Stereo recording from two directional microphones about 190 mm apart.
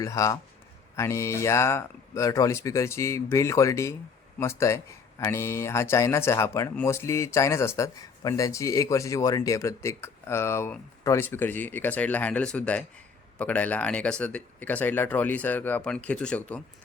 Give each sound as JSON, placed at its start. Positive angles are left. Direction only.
{"t": 0.0, "sound": "speech", "side_deg": 15}